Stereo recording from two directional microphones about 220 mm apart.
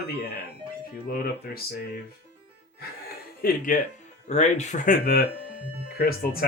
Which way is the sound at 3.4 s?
40° left (ahead or behind).